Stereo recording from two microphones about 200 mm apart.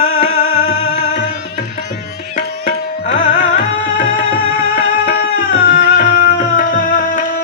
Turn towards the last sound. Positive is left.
turn(degrees=45)  # may be behind; listen again after turning